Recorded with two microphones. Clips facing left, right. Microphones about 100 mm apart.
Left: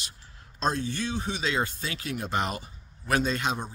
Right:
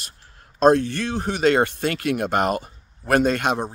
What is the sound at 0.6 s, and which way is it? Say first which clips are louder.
Speech: right 12 dB; 60° right (ahead or behind).